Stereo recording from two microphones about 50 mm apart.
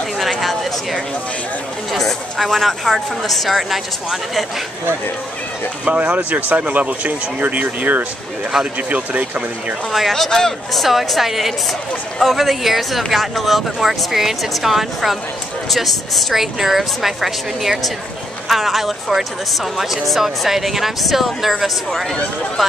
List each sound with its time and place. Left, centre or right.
0.2 s a sound: centre
1.9 s speech: centre
5.9 s speech: right
10.1 s speech: centre